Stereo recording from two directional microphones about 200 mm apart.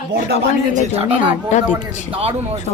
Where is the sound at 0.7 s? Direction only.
35° right (ahead or behind).